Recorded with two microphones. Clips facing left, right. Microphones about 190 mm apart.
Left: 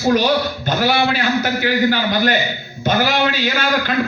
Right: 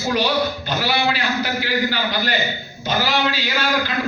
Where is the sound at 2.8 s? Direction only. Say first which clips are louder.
Left 4 dB; 50° left (ahead or behind).